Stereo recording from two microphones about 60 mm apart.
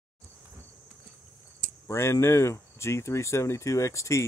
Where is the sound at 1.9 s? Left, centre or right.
Left.